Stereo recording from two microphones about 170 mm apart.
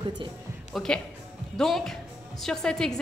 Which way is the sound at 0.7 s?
5° left (ahead or behind).